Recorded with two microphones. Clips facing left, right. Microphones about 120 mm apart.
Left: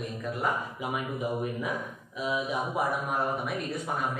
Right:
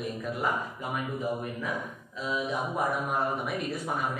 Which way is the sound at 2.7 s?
Centre (ahead or behind).